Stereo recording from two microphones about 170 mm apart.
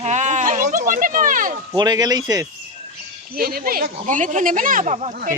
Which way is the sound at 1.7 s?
25° right (ahead or behind).